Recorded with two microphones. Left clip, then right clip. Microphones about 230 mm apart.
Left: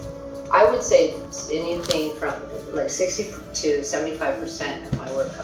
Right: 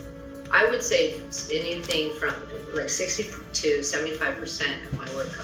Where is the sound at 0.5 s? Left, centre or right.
Right.